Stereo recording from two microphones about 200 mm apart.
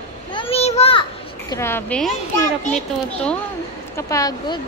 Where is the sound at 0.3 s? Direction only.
25° left (ahead or behind).